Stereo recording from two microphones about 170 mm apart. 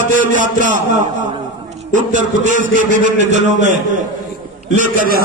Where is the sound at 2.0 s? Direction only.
50° right (ahead or behind).